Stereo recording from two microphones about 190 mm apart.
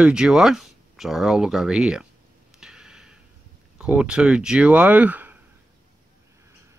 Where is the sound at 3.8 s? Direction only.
5° right (ahead or behind).